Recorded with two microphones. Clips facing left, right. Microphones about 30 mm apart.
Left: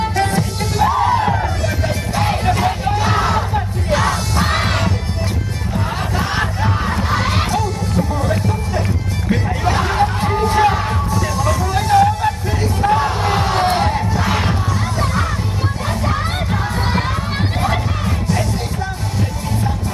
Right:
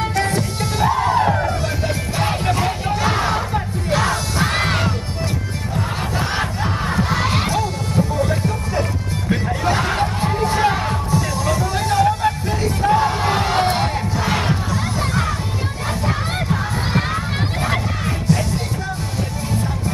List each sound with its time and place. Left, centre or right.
0.1 s music: left
0.8 s music: centre
4.4 s crowd: centre
6.1 s battle cry: centre
7.1 s crowd: centre
9.3 s music: centre
13.7 s crowd: centre